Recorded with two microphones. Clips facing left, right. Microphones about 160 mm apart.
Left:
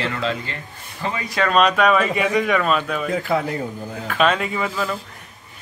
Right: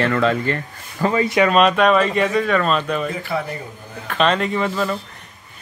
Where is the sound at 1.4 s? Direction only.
Centre (ahead or behind).